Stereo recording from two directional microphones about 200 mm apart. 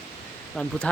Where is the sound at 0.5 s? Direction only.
5° left (ahead or behind).